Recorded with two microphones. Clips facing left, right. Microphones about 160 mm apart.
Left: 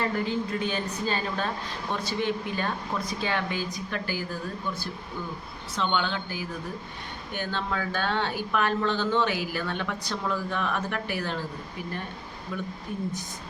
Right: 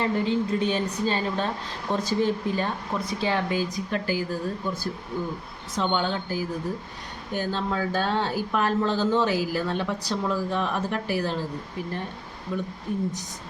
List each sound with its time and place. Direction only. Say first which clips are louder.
0.0 s a woman's voice: right 3 dB; 25° right (ahead or behind)
1.9 s speech: right 5 dB; 40° right (ahead or behind)
5.7 s speech: right 2 dB; 40° right (ahead or behind)
12.5 s a woman's voice: right 4 dB; 20° right (ahead or behind)